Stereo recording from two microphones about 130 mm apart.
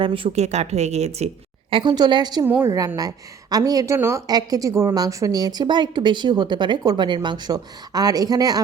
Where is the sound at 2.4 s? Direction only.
20° right (ahead or behind).